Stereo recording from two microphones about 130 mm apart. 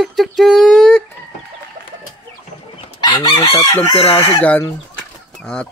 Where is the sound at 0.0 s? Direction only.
Centre (ahead or behind).